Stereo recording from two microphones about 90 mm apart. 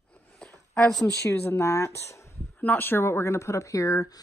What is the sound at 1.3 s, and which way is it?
Speech, 35° left (ahead or behind).